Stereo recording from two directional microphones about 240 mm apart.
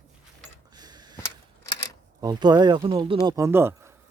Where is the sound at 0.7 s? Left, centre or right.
Centre.